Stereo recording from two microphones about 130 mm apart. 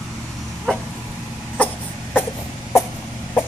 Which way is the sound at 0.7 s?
5° left (ahead or behind).